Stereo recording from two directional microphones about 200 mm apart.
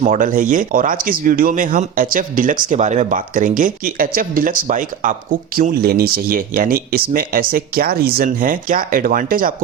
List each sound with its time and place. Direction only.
0.0 s speech: 40° right (ahead or behind)